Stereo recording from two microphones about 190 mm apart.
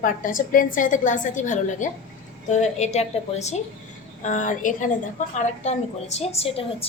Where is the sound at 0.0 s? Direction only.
45° left (ahead or behind).